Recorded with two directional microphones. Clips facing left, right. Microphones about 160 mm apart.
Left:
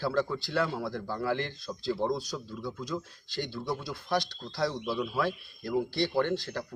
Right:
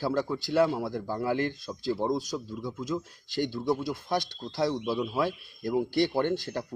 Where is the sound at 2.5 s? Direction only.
5° right (ahead or behind).